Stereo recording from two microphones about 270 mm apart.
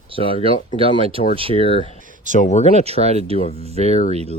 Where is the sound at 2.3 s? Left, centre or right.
Left.